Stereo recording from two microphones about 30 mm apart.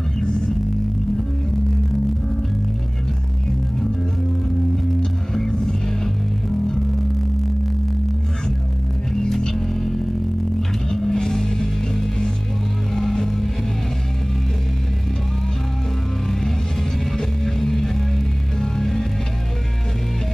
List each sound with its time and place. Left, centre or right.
5.3 s music: centre
9.5 s music: centre
17.2 s music: centre